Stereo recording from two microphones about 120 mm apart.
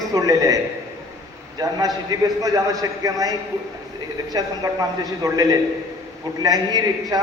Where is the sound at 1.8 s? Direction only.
30° right (ahead or behind).